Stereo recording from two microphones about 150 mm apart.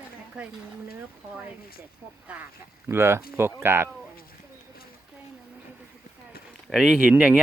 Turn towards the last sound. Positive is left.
turn(degrees=-10)  # may be behind; listen again after turning